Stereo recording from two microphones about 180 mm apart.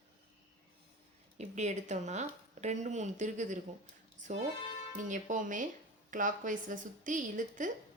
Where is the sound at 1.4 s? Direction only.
40° right (ahead or behind).